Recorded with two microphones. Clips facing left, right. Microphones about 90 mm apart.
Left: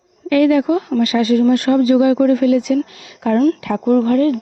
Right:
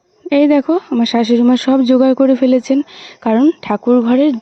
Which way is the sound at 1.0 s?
85° right.